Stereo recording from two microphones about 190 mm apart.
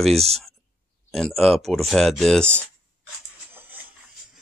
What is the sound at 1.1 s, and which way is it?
Speech, centre (ahead or behind).